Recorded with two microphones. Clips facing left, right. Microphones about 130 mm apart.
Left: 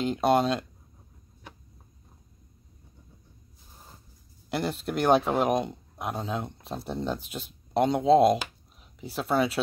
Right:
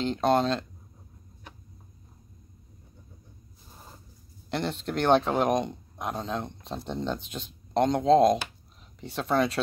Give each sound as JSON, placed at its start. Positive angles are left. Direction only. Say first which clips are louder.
{"t": 0.0, "sound": "speech", "louder": "left 1 dB", "side_deg": 10}
{"t": 4.5, "sound": "speech", "louder": "left 1 dB", "side_deg": 5}